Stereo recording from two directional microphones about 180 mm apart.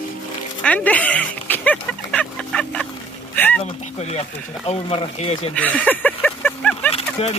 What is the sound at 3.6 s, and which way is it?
Speech, 35° left (ahead or behind).